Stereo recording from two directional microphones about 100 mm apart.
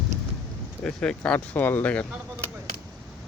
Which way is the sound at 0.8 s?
10° left (ahead or behind).